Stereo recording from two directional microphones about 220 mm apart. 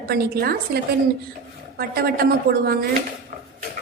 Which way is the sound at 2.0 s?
45° right (ahead or behind).